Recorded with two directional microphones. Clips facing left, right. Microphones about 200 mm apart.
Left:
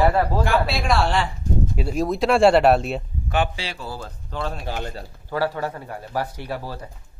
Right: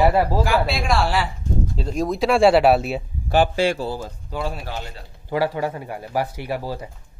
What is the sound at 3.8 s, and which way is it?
Speech, 20° right (ahead or behind).